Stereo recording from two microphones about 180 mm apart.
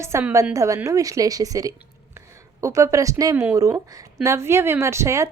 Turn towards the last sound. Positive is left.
turn(degrees=-15)  # may be behind; listen again after turning